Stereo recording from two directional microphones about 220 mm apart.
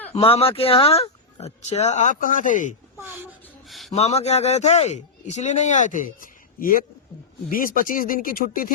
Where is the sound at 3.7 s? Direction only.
Centre (ahead or behind).